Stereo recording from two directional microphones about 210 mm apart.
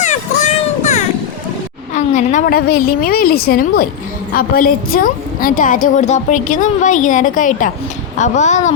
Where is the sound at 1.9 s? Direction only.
35° left (ahead or behind).